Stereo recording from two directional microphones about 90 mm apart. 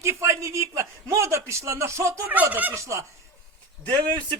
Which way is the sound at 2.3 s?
20° right (ahead or behind).